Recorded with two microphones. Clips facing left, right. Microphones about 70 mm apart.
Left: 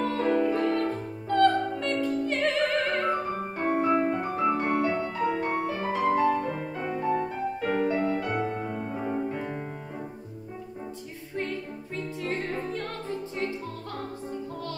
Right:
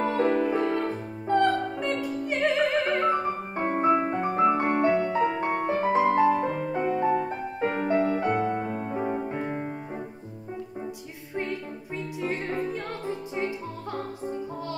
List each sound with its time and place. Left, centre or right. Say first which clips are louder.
0.0 s music: right 1 dB; centre
6.4 s music: right 5 dB; right
6.9 s music: right 2 dB; centre
7.2 s music: even; right
12.2 s music: right 3 dB; centre